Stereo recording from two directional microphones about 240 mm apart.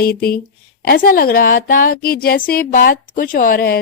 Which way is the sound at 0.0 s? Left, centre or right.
Left.